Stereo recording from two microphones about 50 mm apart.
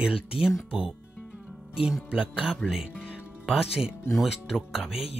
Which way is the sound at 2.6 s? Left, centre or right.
Centre.